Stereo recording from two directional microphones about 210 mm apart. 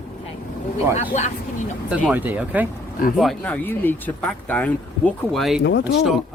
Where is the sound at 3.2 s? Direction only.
5° left (ahead or behind).